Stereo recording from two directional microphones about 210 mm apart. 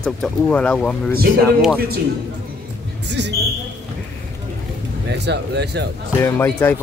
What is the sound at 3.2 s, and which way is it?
Speech, 55° right (ahead or behind).